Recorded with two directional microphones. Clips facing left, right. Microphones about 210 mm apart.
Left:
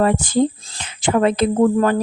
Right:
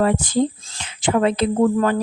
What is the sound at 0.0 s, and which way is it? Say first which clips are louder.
Speech: left 2 dB; 50° left (ahead or behind).